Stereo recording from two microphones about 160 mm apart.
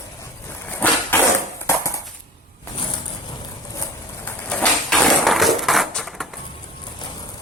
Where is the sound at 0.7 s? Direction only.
10° left (ahead or behind).